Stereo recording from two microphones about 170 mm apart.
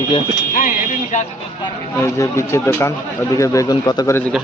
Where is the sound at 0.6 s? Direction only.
45° left (ahead or behind).